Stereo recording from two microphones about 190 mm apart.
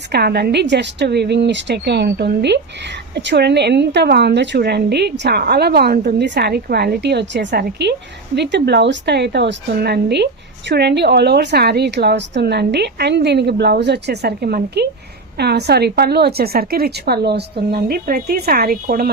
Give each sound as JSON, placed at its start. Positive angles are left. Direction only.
{"t": 0.1, "sound": "a woman's voice", "side_deg": -55}